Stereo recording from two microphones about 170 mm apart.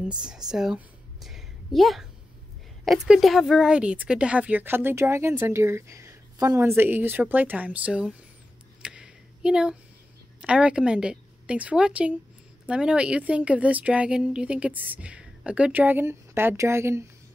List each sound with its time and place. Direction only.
0.2 s a woman's voice: 5° right (ahead or behind)
8.8 s a sound: 5° right (ahead or behind)
10.4 s speech: 5° right (ahead or behind)